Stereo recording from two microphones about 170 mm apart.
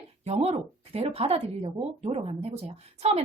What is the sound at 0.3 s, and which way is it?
Speech, 35° right (ahead or behind).